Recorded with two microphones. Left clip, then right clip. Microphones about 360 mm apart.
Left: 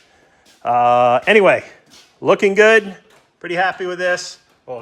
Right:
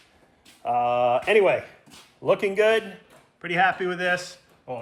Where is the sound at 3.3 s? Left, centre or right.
Centre.